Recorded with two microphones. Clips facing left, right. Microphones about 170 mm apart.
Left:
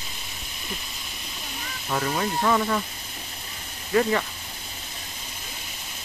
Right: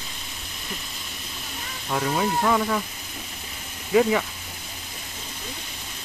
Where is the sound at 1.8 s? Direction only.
5° right (ahead or behind).